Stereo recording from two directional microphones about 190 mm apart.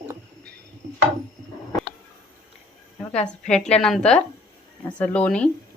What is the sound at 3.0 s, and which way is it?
A woman's voice, 5° left (ahead or behind).